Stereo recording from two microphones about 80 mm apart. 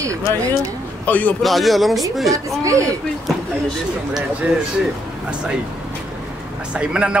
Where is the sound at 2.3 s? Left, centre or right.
Right.